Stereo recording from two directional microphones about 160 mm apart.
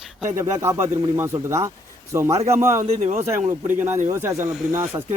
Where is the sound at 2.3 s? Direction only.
40° right (ahead or behind).